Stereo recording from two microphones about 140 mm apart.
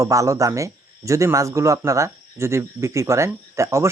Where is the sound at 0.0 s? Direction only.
25° right (ahead or behind).